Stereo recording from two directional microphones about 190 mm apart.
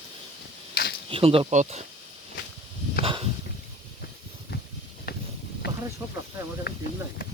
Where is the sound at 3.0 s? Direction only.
30° right (ahead or behind).